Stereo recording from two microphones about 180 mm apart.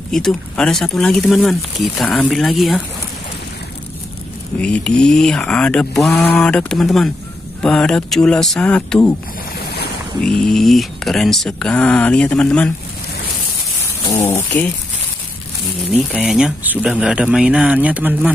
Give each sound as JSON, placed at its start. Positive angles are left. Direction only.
{"t": 0.1, "sound": "speech", "side_deg": 5}
{"t": 4.6, "sound": "speech", "side_deg": 5}
{"t": 10.2, "sound": "speech", "side_deg": 0}
{"t": 14.0, "sound": "speech", "side_deg": 15}
{"t": 15.9, "sound": "speech", "side_deg": 0}